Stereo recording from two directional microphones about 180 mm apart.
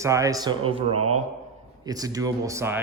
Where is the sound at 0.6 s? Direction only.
30° right (ahead or behind).